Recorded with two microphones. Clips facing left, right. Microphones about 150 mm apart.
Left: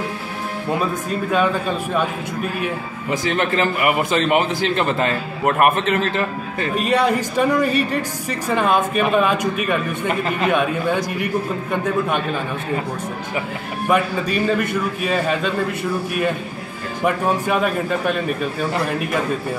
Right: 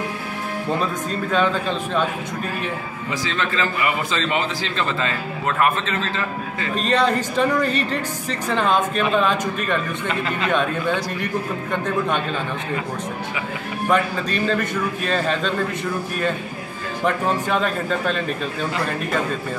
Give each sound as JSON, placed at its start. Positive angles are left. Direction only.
{"t": 1.3, "sound": "speech", "side_deg": 10}
{"t": 3.1, "sound": "a man's voice", "side_deg": 55}
{"t": 6.7, "sound": "speech", "side_deg": 10}
{"t": 13.8, "sound": "speech", "side_deg": 10}
{"t": 17.0, "sound": "speech", "side_deg": 10}